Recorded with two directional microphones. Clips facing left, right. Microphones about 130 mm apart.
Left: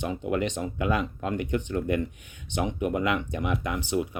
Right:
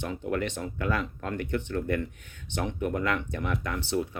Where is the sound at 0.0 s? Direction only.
15° left (ahead or behind).